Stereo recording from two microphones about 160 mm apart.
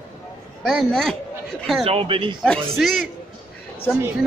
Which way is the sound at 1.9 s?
35° right (ahead or behind).